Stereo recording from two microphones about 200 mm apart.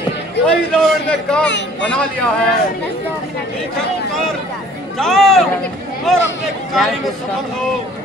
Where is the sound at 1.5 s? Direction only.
65° left (ahead or behind).